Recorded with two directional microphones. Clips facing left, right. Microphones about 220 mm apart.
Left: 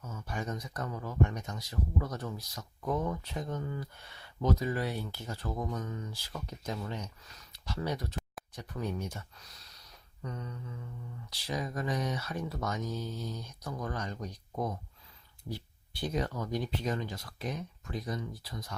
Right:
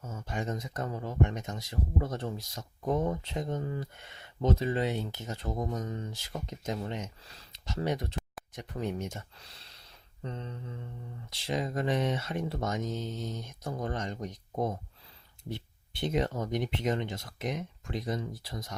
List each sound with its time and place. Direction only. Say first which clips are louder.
0.0 s speech: right 3 dB; 25° right (ahead or behind)